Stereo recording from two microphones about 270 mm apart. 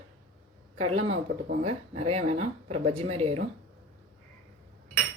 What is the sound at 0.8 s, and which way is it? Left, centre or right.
Speech, right.